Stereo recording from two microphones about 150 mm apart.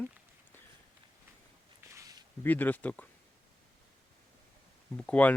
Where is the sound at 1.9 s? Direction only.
25° right (ahead or behind).